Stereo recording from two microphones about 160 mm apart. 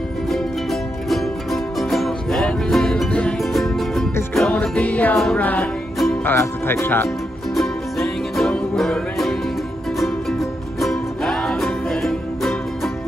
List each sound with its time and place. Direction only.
0.3 s music: centre (ahead or behind)
6.2 s speech: 15° left (ahead or behind)
7.5 s music: centre (ahead or behind)